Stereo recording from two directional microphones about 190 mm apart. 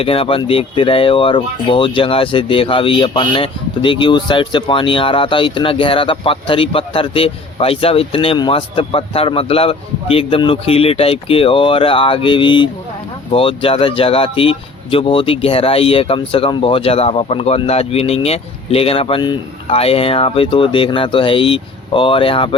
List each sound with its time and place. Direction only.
0.0 s speech: 30° left (ahead or behind)